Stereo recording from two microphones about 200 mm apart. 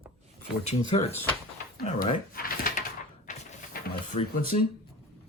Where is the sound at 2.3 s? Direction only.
45° left (ahead or behind).